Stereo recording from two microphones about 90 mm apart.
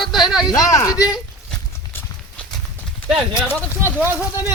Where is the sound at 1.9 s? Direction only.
25° left (ahead or behind).